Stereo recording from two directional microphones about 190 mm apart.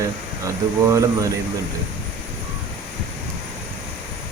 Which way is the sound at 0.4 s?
15° right (ahead or behind).